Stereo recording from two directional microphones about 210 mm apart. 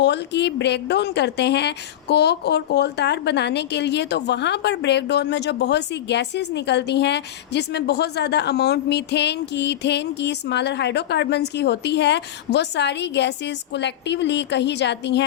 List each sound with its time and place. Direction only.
0.0 s a woman's voice: 55° left (ahead or behind)